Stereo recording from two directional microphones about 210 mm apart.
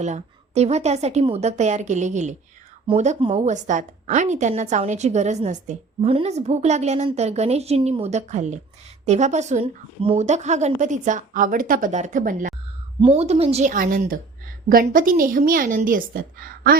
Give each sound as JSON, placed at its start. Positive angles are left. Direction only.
{"t": 0.0, "sound": "a woman's voice", "side_deg": -30}